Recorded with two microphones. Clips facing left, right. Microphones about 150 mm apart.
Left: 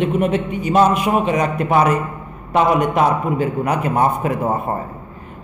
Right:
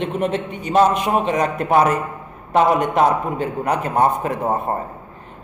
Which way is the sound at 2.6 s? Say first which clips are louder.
Even; 5° left (ahead or behind).